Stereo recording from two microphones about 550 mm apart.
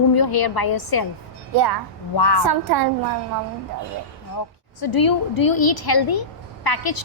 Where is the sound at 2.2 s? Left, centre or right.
Left.